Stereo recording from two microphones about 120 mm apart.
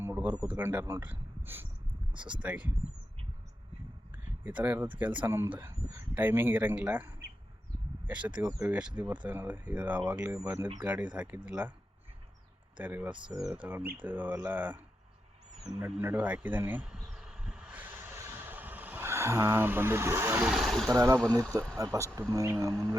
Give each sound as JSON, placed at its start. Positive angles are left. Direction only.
{"t": 0.0, "sound": "a sound", "side_deg": -20}
{"t": 0.5, "sound": "speech", "side_deg": -15}
{"t": 4.4, "sound": "speech", "side_deg": -15}
{"t": 8.4, "sound": "speech", "side_deg": -25}
{"t": 8.7, "sound": "speech", "side_deg": -10}
{"t": 12.7, "sound": "speech", "side_deg": -15}
{"t": 15.6, "sound": "insect", "side_deg": -15}
{"t": 20.5, "sound": "speech", "side_deg": 0}
{"t": 20.9, "sound": "speech", "side_deg": -25}